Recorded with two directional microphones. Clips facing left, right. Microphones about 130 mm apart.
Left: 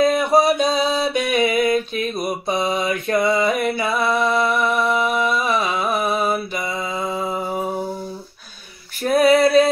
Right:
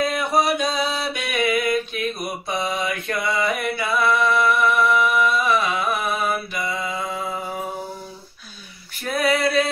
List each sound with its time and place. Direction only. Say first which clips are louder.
0.1 s mantra: left 5 dB; 30° left (ahead or behind)
9.0 s female singing: left 7 dB; 35° left (ahead or behind)